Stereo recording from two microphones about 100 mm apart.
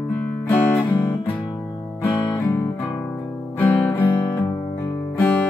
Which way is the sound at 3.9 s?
20° left (ahead or behind).